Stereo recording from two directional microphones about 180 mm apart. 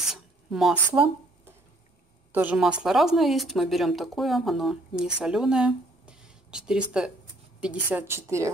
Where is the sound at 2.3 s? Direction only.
10° right (ahead or behind).